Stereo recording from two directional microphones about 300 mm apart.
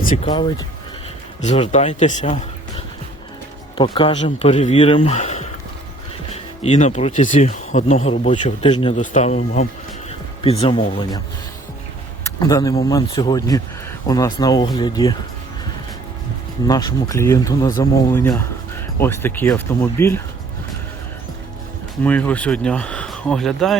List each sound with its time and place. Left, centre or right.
0.1 s speech: centre
6.6 s speech: left
12.4 s speech: centre
16.6 s speech: centre
22.0 s speech: centre